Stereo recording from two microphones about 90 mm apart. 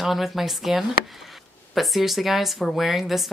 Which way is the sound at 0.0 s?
Centre (ahead or behind).